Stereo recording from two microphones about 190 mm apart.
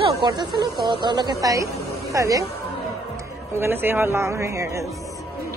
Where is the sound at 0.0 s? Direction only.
25° right (ahead or behind).